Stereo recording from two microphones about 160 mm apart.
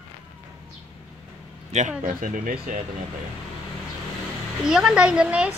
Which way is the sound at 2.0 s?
55° right (ahead or behind).